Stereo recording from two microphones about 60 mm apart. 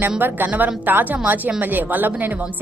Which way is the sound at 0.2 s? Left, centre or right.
Right.